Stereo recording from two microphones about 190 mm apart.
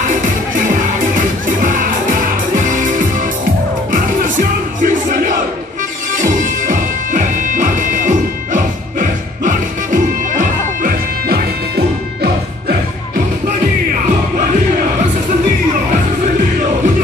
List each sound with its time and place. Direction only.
1.1 s music: 45° right (ahead or behind)